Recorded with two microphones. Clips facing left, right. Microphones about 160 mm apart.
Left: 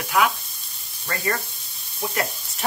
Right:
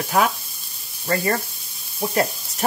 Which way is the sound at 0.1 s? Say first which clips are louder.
Right 1 dB; 40° right (ahead or behind).